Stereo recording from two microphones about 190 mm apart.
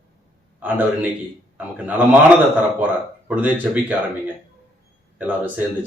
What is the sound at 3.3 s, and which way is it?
Speech, 10° right (ahead or behind).